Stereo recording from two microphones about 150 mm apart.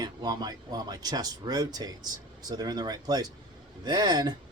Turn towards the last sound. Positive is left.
turn(degrees=-25)  # may be behind; listen again after turning